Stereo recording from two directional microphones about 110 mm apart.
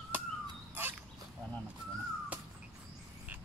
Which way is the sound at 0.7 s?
20° right (ahead or behind).